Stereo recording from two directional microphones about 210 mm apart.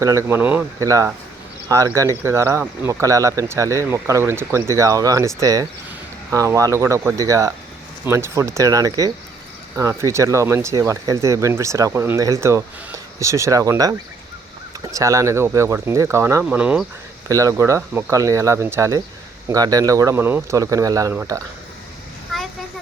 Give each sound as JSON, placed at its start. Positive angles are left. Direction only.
{"t": 0.0, "sound": "speech", "side_deg": -15}
{"t": 14.9, "sound": "speech", "side_deg": -15}